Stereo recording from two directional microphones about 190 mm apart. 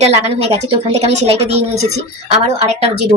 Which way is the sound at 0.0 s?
30° right (ahead or behind).